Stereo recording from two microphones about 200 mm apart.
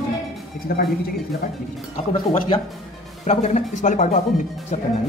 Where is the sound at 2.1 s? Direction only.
30° left (ahead or behind).